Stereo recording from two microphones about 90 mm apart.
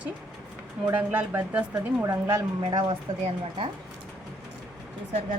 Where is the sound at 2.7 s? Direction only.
55° right (ahead or behind).